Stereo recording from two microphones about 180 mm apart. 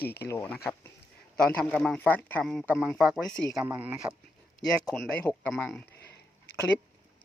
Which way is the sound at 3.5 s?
10° right (ahead or behind).